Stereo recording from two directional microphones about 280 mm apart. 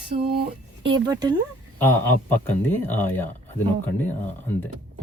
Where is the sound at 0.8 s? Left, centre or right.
Centre.